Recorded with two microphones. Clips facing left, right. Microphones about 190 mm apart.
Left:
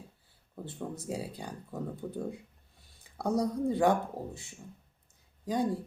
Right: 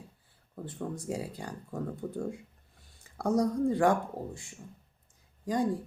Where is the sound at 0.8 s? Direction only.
5° left (ahead or behind).